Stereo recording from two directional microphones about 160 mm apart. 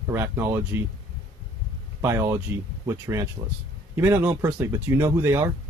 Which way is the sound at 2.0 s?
15° right (ahead or behind).